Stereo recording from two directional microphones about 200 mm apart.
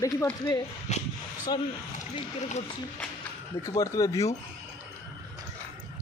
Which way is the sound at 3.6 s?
15° left (ahead or behind).